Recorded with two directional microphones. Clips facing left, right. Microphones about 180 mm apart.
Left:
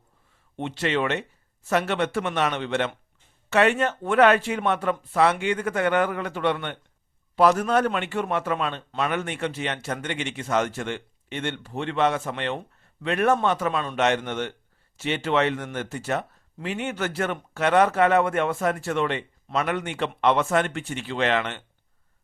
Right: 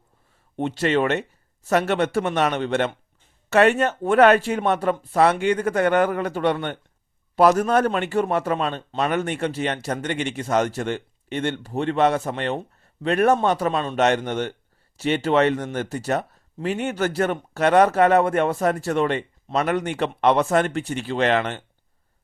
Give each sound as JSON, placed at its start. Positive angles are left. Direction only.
{"t": 0.5, "sound": "a man's voice", "side_deg": -40}